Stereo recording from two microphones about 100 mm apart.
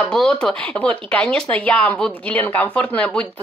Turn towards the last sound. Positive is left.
turn(degrees=10)  # may be behind; listen again after turning